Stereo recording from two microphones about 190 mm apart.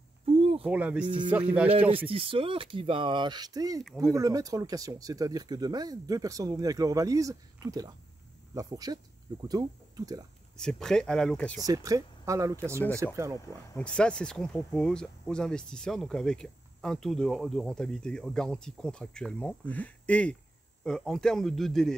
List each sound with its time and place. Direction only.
0.2 s a sound: 30° right (ahead or behind)
0.7 s speech: 5° right (ahead or behind)
1.0 s speech: 25° right (ahead or behind)
1.3 s speech: 5° right (ahead or behind)
2.0 s speech: 30° right (ahead or behind)
10.6 s speech: 5° left (ahead or behind)
11.6 s speech: 20° right (ahead or behind)
13.7 s speech: 5° left (ahead or behind)